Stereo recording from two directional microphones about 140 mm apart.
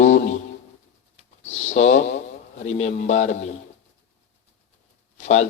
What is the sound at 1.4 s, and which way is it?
Speech, 55° left (ahead or behind).